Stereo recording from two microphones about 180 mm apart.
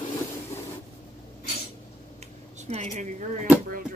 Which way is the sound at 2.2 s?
40° right (ahead or behind).